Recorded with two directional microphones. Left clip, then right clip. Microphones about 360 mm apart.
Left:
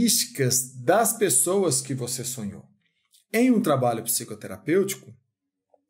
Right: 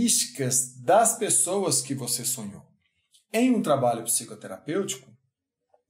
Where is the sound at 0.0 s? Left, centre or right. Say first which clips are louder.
Left 3 dB; left.